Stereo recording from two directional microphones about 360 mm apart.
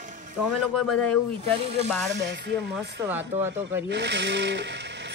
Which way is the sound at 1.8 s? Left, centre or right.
Right.